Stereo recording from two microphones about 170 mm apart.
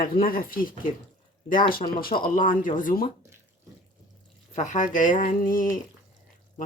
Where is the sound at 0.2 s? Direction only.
60° left (ahead or behind).